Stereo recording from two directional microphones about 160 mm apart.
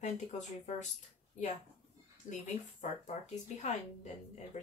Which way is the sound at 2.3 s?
50° left (ahead or behind).